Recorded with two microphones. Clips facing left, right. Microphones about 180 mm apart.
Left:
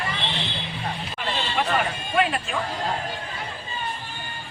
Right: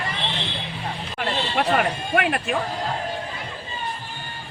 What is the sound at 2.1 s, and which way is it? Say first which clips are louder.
Speech: even; 60° right (ahead or behind).